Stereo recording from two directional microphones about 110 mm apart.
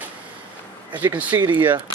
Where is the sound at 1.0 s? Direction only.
15° right (ahead or behind).